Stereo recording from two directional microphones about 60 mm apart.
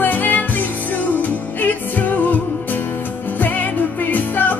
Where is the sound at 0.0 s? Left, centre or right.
Left.